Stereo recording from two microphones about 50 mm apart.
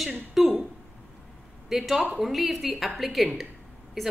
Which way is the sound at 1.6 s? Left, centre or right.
Centre.